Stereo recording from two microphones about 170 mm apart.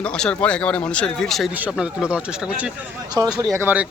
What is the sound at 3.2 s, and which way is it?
Speech, 20° right (ahead or behind).